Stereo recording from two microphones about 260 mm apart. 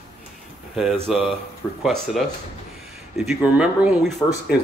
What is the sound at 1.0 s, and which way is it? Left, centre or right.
Speech, centre.